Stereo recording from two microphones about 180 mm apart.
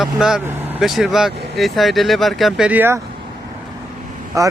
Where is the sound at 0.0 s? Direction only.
5° right (ahead or behind).